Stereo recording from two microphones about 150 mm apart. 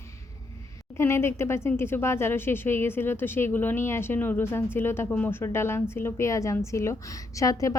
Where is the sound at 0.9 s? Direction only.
15° left (ahead or behind).